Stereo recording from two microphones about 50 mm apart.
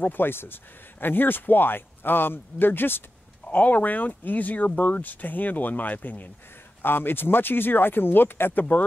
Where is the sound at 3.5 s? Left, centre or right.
Left.